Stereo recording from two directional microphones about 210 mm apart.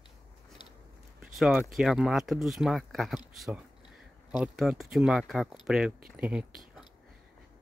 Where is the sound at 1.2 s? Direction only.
Centre (ahead or behind).